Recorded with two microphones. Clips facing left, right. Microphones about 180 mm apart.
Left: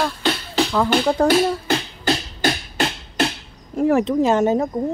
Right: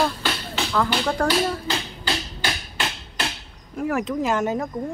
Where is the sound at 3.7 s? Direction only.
30° left (ahead or behind).